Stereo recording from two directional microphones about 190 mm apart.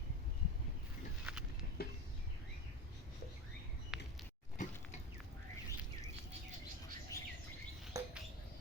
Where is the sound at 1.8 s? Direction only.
55° left (ahead or behind).